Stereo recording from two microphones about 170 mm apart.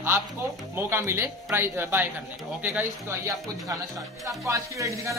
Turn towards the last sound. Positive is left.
turn(degrees=-15)  # may be behind; listen again after turning